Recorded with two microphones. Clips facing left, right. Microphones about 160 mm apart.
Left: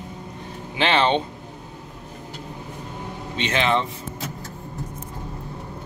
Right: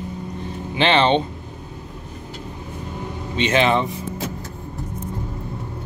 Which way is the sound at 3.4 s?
15° right (ahead or behind).